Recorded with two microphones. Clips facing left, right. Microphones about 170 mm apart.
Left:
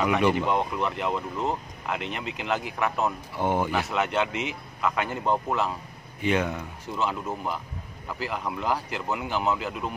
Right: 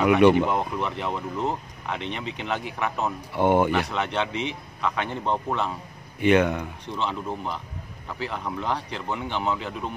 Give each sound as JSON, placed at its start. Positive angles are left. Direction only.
{"t": 0.5, "sound": "speech", "side_deg": 0}
{"t": 3.3, "sound": "speech", "side_deg": -65}
{"t": 3.7, "sound": "speech", "side_deg": 5}
{"t": 6.2, "sound": "speech", "side_deg": -65}
{"t": 6.9, "sound": "speech", "side_deg": 5}